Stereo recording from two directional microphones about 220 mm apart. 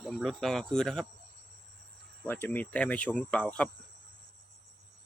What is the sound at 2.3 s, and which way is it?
Speech, 10° left (ahead or behind).